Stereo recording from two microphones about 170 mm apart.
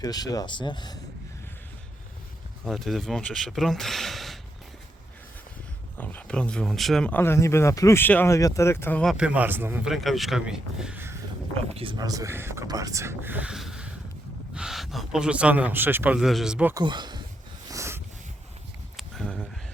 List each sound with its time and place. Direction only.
0.0 s speech: 20° left (ahead or behind)
2.6 s speech: centre (ahead or behind)
6.0 s speech: 10° left (ahead or behind)
9.1 s speech: 5° right (ahead or behind)
9.9 s speech: centre (ahead or behind)
11.7 s speech: 30° right (ahead or behind); by 16.7 s 5° right (ahead or behind)
16.7 s speech: 25° right (ahead or behind)
17.7 s a sound: 15° right (ahead or behind)
18.9 s a sound: 5° left (ahead or behind)